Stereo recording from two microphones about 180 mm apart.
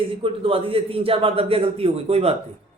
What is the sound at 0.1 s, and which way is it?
A man's voice, 30° right (ahead or behind).